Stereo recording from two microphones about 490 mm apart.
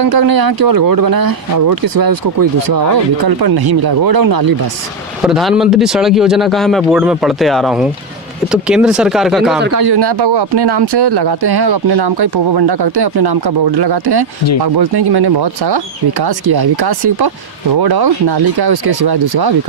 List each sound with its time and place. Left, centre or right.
0.0 s speech: right
5.2 s speech: centre
9.8 s speech: right